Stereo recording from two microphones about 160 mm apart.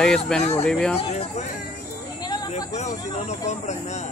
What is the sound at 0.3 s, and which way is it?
Speech, 5° left (ahead or behind).